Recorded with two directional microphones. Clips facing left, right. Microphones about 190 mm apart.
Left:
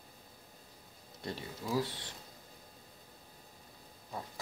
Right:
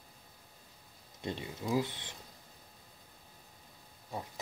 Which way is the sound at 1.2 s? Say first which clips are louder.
Right 3 dB; 20° right (ahead or behind).